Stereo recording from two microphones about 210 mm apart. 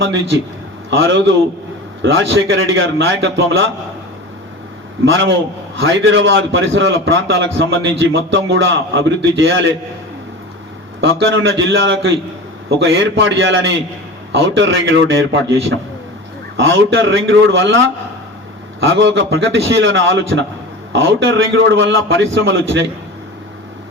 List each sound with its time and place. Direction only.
0.0 s a man's voice: 60° right (ahead or behind)
5.0 s a man's voice: 65° right (ahead or behind)
11.0 s a man's voice: 65° right (ahead or behind)
16.6 s a man's voice: 65° right (ahead or behind)